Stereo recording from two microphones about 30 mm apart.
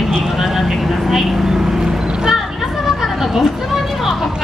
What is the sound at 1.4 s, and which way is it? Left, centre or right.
Vehicle, right.